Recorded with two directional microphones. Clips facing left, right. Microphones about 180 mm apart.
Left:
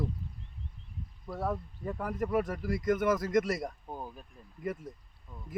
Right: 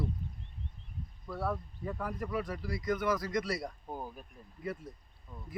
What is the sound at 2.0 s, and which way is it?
Speech, 45° left (ahead or behind).